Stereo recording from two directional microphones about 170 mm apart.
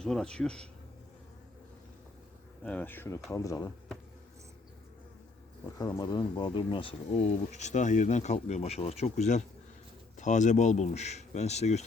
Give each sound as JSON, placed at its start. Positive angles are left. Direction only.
{"t": 0.0, "sound": "speech", "side_deg": 5}
{"t": 2.6, "sound": "speech", "side_deg": 10}
{"t": 5.7, "sound": "speech", "side_deg": 20}